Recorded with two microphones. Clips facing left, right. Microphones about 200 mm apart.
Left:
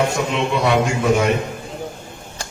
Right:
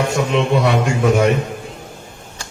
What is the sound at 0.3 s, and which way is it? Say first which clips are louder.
Speech: right 5 dB; 50° right (ahead or behind).